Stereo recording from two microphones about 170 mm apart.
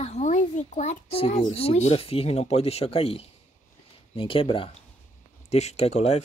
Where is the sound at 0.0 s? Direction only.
40° left (ahead or behind).